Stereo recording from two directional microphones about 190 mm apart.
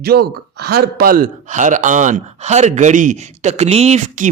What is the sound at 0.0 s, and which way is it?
Speech, 55° right (ahead or behind).